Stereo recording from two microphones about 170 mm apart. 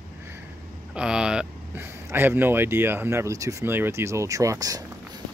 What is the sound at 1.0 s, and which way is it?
Speech, 5° right (ahead or behind).